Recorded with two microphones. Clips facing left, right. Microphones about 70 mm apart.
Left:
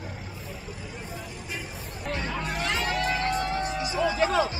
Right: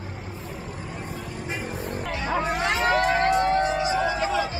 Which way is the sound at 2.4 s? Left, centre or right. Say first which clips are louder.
Right 9 dB; right.